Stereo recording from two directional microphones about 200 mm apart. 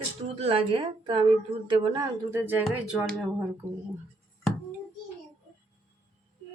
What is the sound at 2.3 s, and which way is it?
Speech, 10° right (ahead or behind).